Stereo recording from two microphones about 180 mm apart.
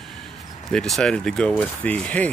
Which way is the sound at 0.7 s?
5° left (ahead or behind).